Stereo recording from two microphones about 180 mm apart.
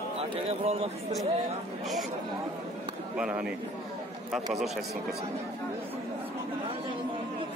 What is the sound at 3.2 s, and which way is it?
Speech, 5° right (ahead or behind).